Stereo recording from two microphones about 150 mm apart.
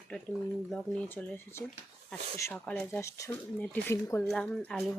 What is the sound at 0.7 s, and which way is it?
Speech, 10° left (ahead or behind).